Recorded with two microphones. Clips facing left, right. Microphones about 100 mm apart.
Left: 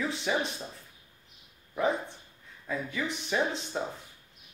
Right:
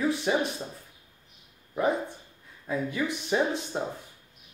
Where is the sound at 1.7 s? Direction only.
10° right (ahead or behind).